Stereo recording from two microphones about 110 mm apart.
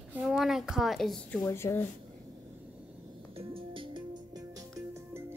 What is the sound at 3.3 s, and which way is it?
Music, 55° right (ahead or behind).